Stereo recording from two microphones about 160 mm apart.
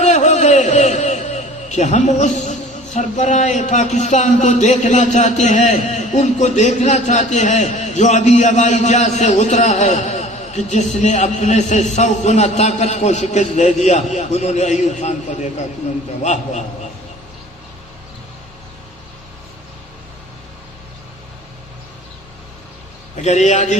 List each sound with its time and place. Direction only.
0.0 s a man's voice: 50° left (ahead or behind)
23.2 s a man's voice: 45° left (ahead or behind)